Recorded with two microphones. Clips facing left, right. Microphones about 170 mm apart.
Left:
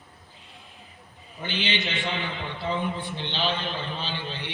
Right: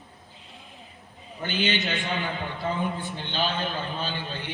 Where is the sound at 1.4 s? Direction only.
45° right (ahead or behind).